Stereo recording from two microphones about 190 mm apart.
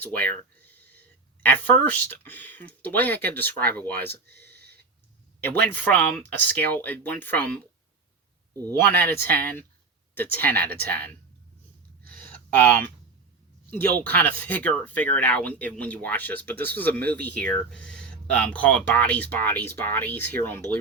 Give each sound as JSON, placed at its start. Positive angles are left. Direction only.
{"t": 0.0, "sound": "speech", "side_deg": 10}
{"t": 4.1, "sound": "a sound", "side_deg": -55}
{"t": 5.7, "sound": "speech", "side_deg": 10}
{"t": 8.6, "sound": "speech", "side_deg": 10}
{"t": 12.0, "sound": "a sound", "side_deg": -50}
{"t": 12.5, "sound": "speech", "side_deg": 10}